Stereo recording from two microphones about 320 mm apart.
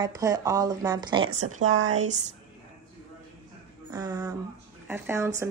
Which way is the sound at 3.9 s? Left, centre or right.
Centre.